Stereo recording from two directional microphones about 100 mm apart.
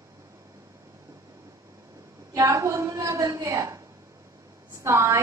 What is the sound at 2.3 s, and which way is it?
A woman's voice, 30° right (ahead or behind).